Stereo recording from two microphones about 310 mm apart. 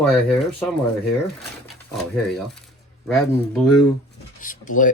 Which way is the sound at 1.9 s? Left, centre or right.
Centre.